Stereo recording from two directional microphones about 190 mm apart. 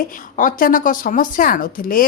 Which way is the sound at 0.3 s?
45° left (ahead or behind).